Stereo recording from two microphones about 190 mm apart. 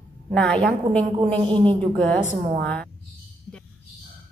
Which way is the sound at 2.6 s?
5° left (ahead or behind).